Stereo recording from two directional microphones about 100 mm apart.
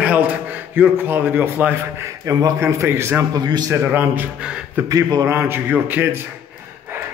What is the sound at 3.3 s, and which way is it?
Speech, 40° right (ahead or behind).